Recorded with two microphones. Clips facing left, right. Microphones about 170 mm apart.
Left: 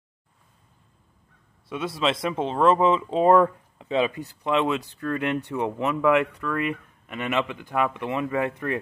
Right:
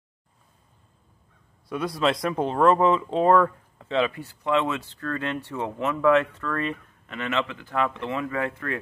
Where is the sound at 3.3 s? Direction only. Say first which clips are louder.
Left 2 dB; 20° left (ahead or behind).